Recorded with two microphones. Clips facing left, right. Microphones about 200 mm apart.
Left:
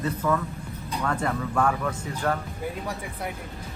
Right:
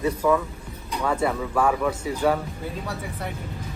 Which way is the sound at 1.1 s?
10° right (ahead or behind).